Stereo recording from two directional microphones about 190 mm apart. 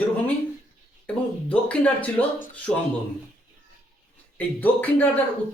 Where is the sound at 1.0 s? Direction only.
5° left (ahead or behind).